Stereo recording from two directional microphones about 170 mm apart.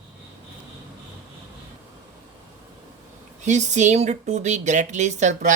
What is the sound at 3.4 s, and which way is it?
Speech, 45° right (ahead or behind).